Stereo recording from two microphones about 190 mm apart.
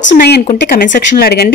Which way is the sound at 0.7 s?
50° left (ahead or behind).